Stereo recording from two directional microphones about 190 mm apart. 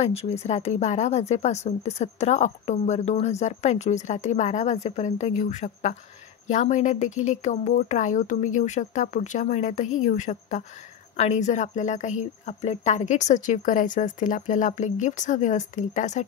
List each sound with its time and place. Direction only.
0.0 s speech: 35° left (ahead or behind)